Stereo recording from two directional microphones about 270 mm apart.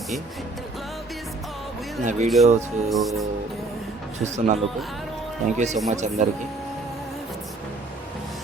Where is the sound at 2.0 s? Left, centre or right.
Right.